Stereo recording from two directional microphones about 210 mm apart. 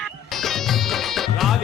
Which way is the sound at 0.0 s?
Centre (ahead or behind).